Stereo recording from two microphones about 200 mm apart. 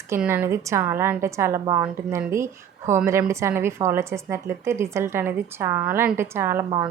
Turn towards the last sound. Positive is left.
turn(degrees=-10)  # may be behind; listen again after turning